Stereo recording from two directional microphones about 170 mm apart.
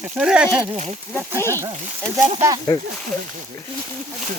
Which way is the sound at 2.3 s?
20° right (ahead or behind).